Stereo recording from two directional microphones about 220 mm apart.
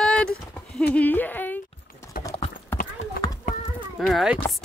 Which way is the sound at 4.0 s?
Centre (ahead or behind).